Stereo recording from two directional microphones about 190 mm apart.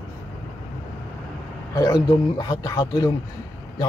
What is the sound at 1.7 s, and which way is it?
A man's voice, 20° left (ahead or behind).